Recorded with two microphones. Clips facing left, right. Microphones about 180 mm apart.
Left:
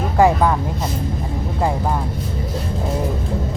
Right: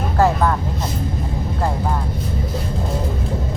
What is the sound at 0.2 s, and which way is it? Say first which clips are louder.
Vehicle: left 3 dB; 15° left (ahead or behind).